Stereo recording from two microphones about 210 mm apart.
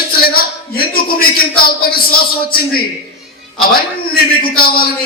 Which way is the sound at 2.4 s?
45° left (ahead or behind).